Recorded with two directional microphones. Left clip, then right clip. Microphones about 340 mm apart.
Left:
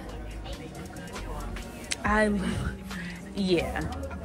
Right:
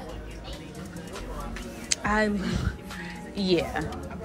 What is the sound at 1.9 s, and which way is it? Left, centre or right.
Music, centre.